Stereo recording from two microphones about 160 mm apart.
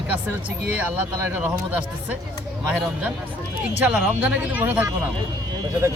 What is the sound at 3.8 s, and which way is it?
Speech, 10° right (ahead or behind).